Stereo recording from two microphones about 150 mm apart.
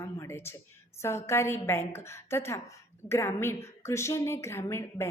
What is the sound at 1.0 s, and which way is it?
A woman's voice, 15° left (ahead or behind).